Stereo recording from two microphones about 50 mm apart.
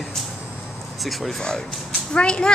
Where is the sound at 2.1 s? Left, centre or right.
Left.